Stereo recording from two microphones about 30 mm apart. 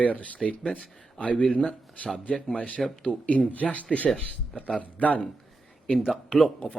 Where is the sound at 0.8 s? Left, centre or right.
Left.